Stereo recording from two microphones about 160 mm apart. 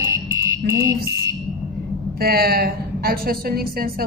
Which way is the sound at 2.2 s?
75° right (ahead or behind).